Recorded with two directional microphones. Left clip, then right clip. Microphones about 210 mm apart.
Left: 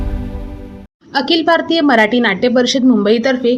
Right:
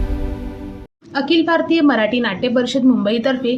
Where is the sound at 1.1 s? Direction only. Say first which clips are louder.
Left 3 dB; 30° left (ahead or behind).